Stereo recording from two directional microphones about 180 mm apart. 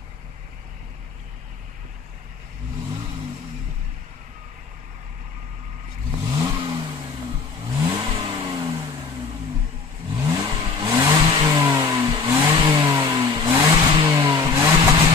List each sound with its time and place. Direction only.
6.2 s vehicle: 20° right (ahead or behind)
10.1 s vehicle: 20° right (ahead or behind)